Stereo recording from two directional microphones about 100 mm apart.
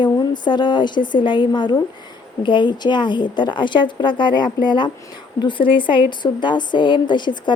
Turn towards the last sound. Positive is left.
turn(degrees=50)  # may be behind; listen again after turning